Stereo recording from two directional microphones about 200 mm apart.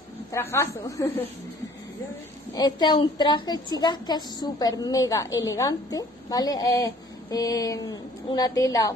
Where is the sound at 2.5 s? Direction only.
20° left (ahead or behind).